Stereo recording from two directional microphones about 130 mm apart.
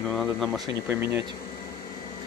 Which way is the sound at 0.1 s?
Centre (ahead or behind).